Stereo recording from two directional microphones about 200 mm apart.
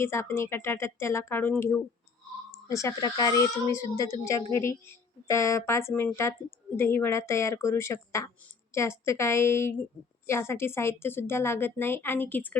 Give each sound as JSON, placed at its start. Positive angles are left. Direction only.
{"t": 0.0, "sound": "a woman's voice", "side_deg": 10}